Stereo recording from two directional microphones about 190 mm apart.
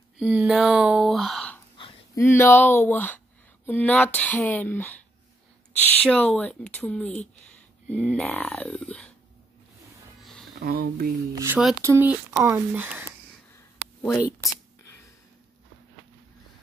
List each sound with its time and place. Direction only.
0.2 s speech: 5° right (ahead or behind)
2.1 s speech: 15° left (ahead or behind)
10.6 s speech: 50° right (ahead or behind)
11.3 s speech: 10° right (ahead or behind)
14.0 s a sound: 15° left (ahead or behind)